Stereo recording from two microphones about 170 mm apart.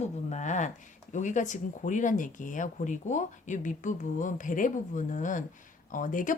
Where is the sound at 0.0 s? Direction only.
45° left (ahead or behind).